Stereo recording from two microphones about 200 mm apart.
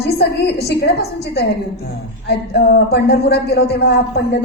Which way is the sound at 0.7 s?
55° left (ahead or behind).